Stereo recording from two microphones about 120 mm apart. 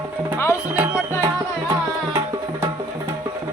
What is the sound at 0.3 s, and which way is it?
Speech, 20° left (ahead or behind).